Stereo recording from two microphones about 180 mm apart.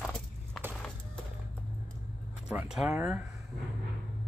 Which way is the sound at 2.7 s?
5° right (ahead or behind).